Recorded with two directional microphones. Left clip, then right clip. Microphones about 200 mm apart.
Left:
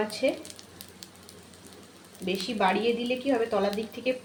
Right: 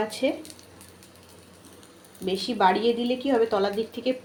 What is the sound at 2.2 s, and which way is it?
A woman's voice, 20° right (ahead or behind).